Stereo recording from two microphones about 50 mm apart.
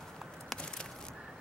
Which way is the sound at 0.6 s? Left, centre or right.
Centre.